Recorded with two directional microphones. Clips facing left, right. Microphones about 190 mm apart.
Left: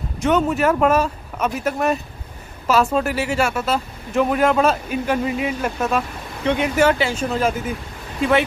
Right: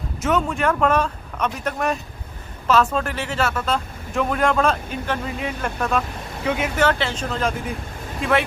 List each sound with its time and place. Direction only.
0.2 s speech: centre (ahead or behind)
6.8 s speech: 10° left (ahead or behind)